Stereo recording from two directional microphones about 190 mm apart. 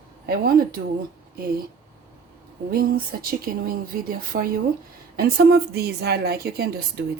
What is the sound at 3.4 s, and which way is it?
A woman's voice, 50° right (ahead or behind).